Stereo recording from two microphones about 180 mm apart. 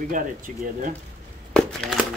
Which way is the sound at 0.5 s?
50° right (ahead or behind).